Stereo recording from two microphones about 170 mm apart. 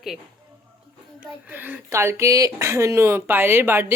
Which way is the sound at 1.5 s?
10° right (ahead or behind).